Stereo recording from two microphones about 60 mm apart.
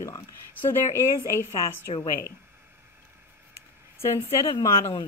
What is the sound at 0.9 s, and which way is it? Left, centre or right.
Speech, left.